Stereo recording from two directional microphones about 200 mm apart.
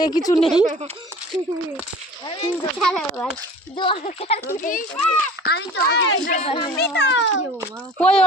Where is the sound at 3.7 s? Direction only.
25° left (ahead or behind).